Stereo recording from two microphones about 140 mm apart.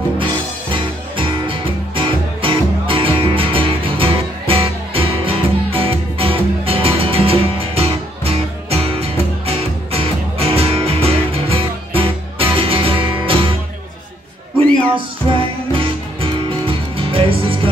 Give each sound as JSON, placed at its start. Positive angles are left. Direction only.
{"t": 0.2, "sound": "music", "side_deg": -40}
{"t": 15.0, "sound": "music", "side_deg": -40}